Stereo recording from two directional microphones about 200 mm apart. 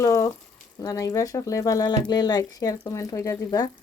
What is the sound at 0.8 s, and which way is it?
Speech, 15° left (ahead or behind).